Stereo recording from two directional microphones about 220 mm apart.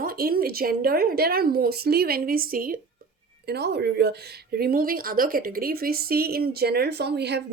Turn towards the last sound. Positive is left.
turn(degrees=-50)  # may be behind; listen again after turning